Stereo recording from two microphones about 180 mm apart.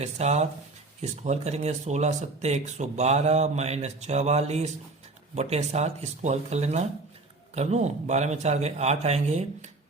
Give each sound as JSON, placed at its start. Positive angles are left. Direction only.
{"t": 0.0, "sound": "speech", "side_deg": -35}